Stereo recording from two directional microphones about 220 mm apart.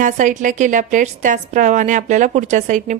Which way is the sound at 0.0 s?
35° right (ahead or behind).